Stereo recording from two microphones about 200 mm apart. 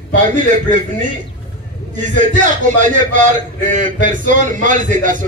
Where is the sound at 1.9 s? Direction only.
40° right (ahead or behind).